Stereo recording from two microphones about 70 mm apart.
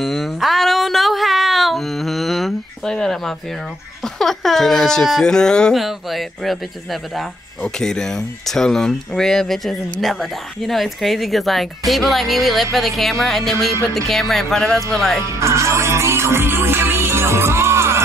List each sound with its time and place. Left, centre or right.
0.0 s music: centre
4.0 s speech: centre
5.8 s speech: centre
15.3 s music: right